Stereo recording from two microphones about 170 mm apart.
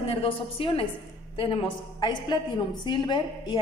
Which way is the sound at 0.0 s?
35° left (ahead or behind).